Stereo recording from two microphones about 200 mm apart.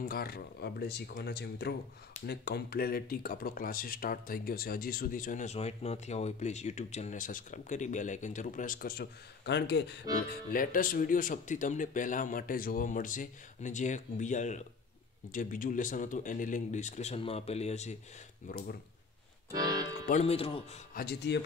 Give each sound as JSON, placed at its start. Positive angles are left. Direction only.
{"t": 0.1, "sound": "speech", "side_deg": 50}
{"t": 10.5, "sound": "speech", "side_deg": 45}
{"t": 18.5, "sound": "speech", "side_deg": 50}
{"t": 19.5, "sound": "speech", "side_deg": -20}
{"t": 20.1, "sound": "speech", "side_deg": 30}
{"t": 20.9, "sound": "speech", "side_deg": 55}